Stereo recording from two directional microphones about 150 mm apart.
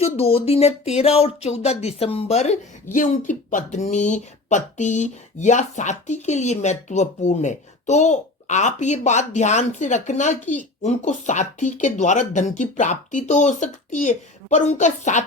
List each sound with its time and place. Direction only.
0.0 s speech: 40° left (ahead or behind)
2.9 s speech: 60° left (ahead or behind)